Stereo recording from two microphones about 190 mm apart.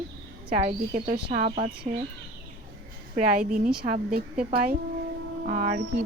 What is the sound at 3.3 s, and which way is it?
Speech, 45° right (ahead or behind).